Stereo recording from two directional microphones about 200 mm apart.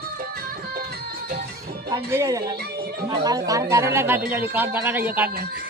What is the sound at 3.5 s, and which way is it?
Speech, 15° right (ahead or behind).